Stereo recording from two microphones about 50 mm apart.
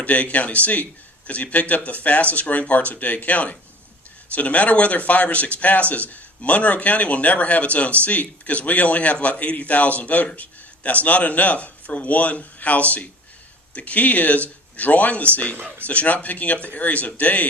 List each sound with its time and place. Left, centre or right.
0.0 s speech: left
15.5 s speech: right
15.9 s speech: left